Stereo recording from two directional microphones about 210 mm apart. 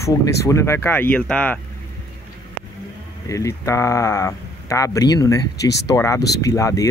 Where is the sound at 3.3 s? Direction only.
15° left (ahead or behind).